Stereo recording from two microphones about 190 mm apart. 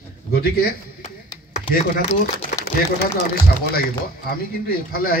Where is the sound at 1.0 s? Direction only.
40° left (ahead or behind).